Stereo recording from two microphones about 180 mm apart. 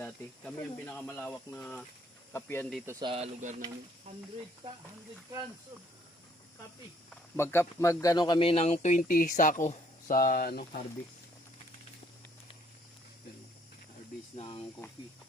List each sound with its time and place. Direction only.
0.0 s speech: 5° left (ahead or behind)
2.8 s speech: 15° right (ahead or behind)
3.1 s speech: 35° right (ahead or behind)
7.1 s speech: 15° left (ahead or behind); by 10.8 s 55° left (ahead or behind)
14.3 s speech: 30° left (ahead or behind)